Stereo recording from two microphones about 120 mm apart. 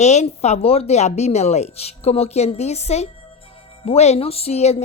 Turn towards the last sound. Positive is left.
turn(degrees=60)  # may be behind; listen again after turning